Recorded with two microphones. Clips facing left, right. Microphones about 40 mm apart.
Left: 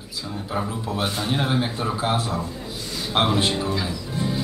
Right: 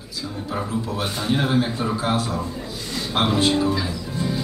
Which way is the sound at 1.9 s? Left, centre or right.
Centre.